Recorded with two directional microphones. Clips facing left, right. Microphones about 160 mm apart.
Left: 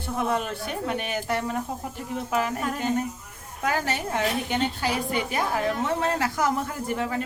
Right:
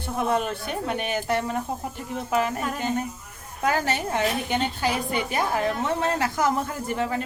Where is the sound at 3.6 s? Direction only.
30° right (ahead or behind).